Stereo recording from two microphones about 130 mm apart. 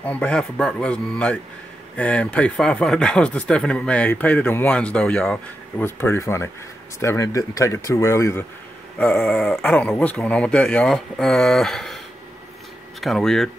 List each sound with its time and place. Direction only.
0.0 s speech: 10° left (ahead or behind)
8.9 s speech: 10° left (ahead or behind)
13.0 s speech: 5° left (ahead or behind)